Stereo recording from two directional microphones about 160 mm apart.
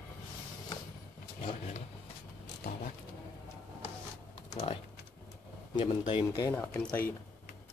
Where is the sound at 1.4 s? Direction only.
45° left (ahead or behind).